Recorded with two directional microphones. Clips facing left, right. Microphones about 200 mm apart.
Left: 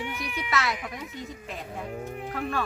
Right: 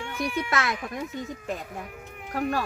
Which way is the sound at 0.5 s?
50° right (ahead or behind).